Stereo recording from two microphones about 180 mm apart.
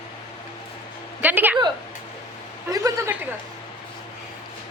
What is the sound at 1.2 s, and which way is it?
Speech, 10° right (ahead or behind).